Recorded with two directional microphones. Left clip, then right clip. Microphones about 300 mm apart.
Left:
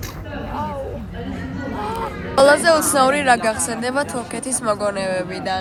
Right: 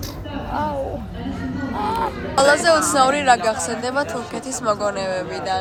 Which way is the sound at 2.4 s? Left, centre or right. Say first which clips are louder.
Left 2 dB; centre.